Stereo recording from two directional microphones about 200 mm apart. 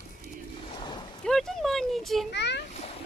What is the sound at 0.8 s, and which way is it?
Boat, 25° left (ahead or behind).